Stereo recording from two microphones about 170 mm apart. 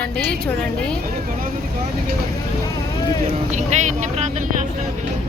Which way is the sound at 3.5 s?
45° right (ahead or behind).